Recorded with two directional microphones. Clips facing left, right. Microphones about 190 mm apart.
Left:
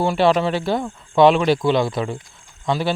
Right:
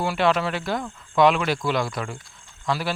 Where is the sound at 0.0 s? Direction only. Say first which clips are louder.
Left 5 dB; 30° left (ahead or behind).